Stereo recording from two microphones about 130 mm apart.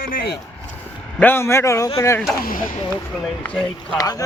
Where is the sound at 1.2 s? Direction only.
15° left (ahead or behind).